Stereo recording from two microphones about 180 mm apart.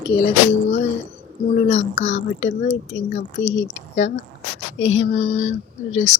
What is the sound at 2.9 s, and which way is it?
Speech, 80° left.